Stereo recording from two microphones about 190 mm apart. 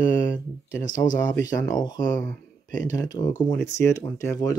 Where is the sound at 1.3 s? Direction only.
20° left (ahead or behind).